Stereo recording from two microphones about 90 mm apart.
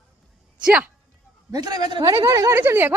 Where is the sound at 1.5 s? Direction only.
45° right (ahead or behind).